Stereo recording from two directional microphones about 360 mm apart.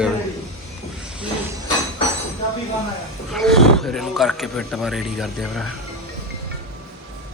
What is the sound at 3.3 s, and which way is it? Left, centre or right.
Speech, centre.